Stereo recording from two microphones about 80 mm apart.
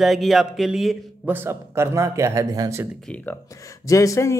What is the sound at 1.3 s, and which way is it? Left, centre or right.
Speech, right.